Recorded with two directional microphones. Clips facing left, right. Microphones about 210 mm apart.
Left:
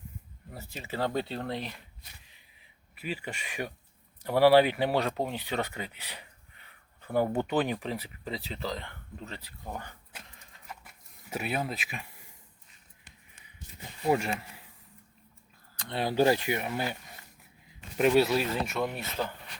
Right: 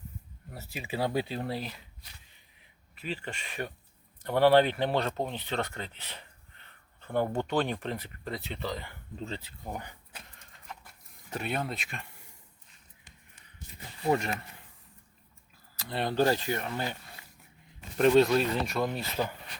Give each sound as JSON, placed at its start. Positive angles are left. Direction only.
{"t": 0.5, "sound": "speech", "side_deg": -5}
{"t": 2.9, "sound": "speech", "side_deg": 10}
{"t": 9.1, "sound": "speech", "side_deg": -25}
{"t": 10.1, "sound": "a sound", "side_deg": 5}
{"t": 14.1, "sound": "speech", "side_deg": 10}
{"t": 15.7, "sound": "speech", "side_deg": -5}
{"t": 16.1, "sound": "speech", "side_deg": 15}